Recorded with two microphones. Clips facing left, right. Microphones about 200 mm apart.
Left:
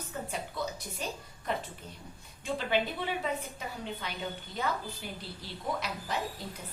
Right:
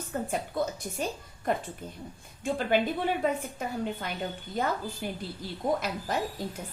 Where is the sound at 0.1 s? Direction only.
50° right (ahead or behind).